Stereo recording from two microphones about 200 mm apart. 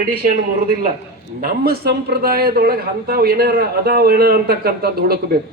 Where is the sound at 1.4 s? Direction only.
50° right (ahead or behind).